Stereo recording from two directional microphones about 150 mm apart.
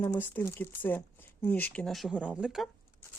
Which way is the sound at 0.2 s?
15° left (ahead or behind).